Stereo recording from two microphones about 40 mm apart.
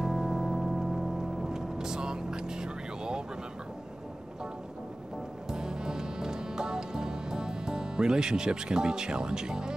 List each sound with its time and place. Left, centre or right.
0.0 s music: centre
5.5 s music: centre